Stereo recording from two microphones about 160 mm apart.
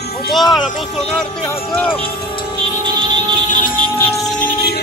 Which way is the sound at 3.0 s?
30° right (ahead or behind).